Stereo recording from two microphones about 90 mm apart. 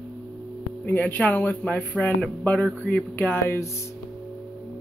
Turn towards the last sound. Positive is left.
turn(degrees=30)  # may be behind; listen again after turning